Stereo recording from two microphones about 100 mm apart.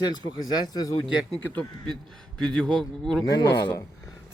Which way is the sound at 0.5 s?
45° left (ahead or behind).